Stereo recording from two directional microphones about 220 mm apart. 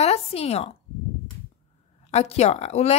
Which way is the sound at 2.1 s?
30° left (ahead or behind).